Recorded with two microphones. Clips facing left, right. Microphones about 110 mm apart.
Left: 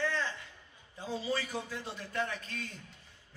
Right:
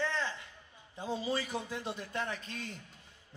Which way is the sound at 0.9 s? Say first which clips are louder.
Right 1 dB; 20° right (ahead or behind).